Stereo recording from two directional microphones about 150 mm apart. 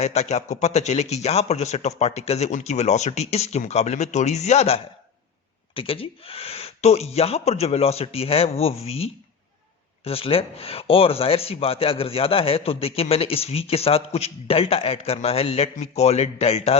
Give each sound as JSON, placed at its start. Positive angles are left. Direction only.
{"t": 0.0, "sound": "speech", "side_deg": 45}